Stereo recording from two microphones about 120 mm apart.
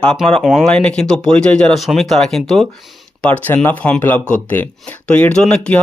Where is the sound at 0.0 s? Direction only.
5° left (ahead or behind).